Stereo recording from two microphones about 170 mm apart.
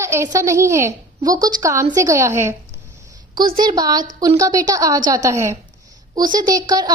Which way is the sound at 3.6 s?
25° right (ahead or behind).